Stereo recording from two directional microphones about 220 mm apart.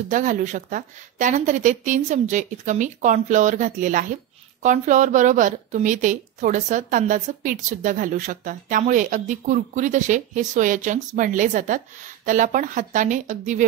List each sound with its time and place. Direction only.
0.1 s a woman's voice: 35° right (ahead or behind)